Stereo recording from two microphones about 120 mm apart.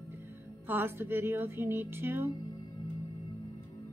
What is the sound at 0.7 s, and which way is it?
A woman's voice, 20° right (ahead or behind).